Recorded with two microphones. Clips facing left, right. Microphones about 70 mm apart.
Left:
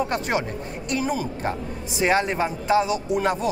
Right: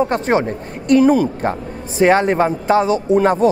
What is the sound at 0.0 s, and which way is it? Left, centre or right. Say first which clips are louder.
Speech: right 8 dB; right.